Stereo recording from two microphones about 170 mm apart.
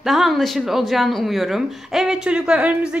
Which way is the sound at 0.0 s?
Centre (ahead or behind).